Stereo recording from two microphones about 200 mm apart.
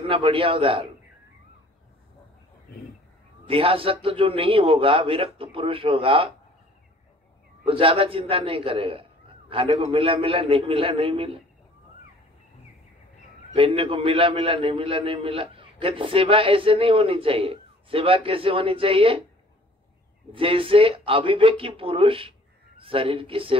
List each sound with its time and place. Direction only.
0.0 s a man's voice: 25° right (ahead or behind)
3.4 s a man's voice: 25° right (ahead or behind)
7.6 s a man's voice: 25° right (ahead or behind)
13.6 s a man's voice: 25° right (ahead or behind)
20.3 s a man's voice: 25° right (ahead or behind)